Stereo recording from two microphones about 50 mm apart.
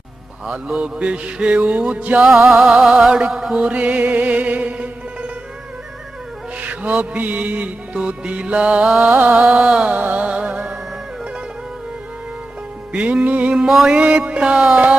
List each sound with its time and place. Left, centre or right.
0.4 s music: right
2.5 s music: centre
3.6 s music: right
6.6 s music: right
9.0 s music: right
9.3 s music: right
12.9 s music: right
13.2 s music: right
13.7 s music: centre
13.9 s music: right